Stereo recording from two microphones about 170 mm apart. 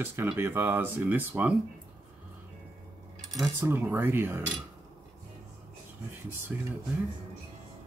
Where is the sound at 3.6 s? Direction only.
10° right (ahead or behind).